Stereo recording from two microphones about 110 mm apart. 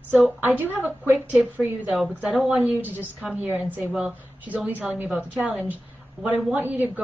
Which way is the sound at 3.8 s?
Centre (ahead or behind).